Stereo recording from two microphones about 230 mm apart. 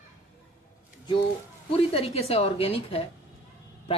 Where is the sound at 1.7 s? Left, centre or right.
Left.